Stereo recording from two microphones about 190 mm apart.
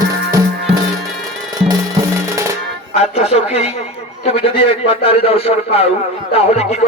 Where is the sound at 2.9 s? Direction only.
35° left (ahead or behind).